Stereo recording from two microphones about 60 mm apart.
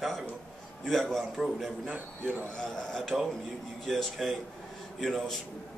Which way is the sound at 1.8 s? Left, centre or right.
Right.